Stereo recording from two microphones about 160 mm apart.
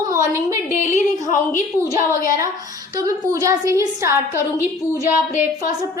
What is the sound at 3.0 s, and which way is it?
A woman's voice, 20° right (ahead or behind).